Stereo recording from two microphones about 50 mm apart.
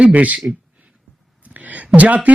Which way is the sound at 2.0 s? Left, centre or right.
Right.